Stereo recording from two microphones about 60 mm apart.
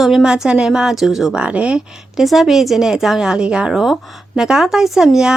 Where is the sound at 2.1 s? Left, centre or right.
Centre.